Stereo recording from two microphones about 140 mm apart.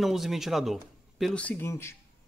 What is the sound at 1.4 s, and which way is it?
Speech, 15° left (ahead or behind).